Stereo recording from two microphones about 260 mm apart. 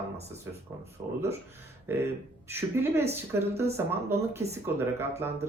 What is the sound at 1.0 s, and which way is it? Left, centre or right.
Speech, centre.